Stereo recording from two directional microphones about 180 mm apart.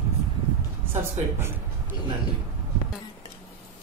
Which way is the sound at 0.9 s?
15° right (ahead or behind).